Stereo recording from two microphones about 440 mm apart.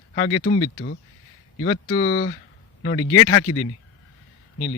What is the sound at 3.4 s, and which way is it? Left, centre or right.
Speech, left.